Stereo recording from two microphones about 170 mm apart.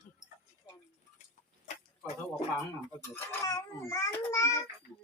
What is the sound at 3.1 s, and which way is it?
A child's voice, 20° left (ahead or behind).